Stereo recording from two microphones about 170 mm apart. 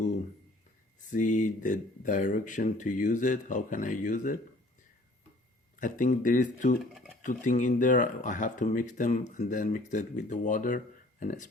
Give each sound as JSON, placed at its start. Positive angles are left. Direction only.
{"t": 1.1, "sound": "speech", "side_deg": 50}
{"t": 5.8, "sound": "speech", "side_deg": 50}